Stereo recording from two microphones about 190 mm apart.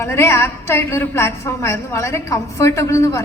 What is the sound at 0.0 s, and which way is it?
A woman's voice, 15° left (ahead or behind).